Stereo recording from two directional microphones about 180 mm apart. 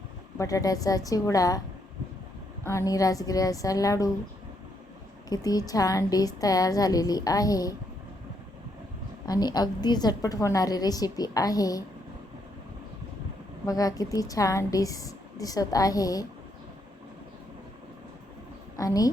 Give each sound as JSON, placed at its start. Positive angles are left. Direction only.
{"t": 0.3, "sound": "a woman's voice", "side_deg": 20}
{"t": 2.6, "sound": "a woman's voice", "side_deg": 20}
{"t": 5.3, "sound": "a woman's voice", "side_deg": 20}
{"t": 9.2, "sound": "a woman's voice", "side_deg": 20}
{"t": 13.7, "sound": "a woman's voice", "side_deg": 20}
{"t": 18.8, "sound": "a woman's voice", "side_deg": 20}